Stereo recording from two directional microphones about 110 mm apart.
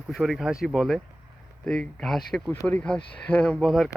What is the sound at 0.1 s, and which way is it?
Speech, centre (ahead or behind).